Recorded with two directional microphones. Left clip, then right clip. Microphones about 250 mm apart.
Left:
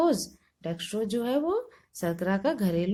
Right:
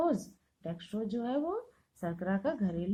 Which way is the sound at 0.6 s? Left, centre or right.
Left.